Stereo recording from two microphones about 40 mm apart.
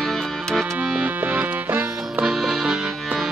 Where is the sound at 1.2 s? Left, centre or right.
Right.